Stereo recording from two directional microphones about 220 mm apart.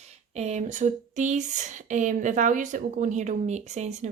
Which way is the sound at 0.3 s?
30° right (ahead or behind).